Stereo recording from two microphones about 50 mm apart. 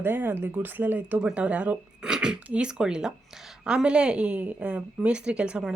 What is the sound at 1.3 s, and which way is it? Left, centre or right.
Speech, right.